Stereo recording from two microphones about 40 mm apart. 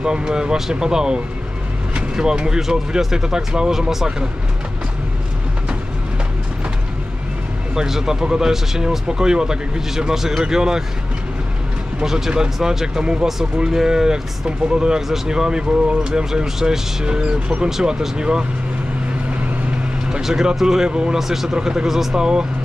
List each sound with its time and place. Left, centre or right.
0.0 s speech: centre
7.7 s speech: centre
12.0 s speech: centre
17.6 s speech: centre
18.1 s speech: right
20.1 s speech: centre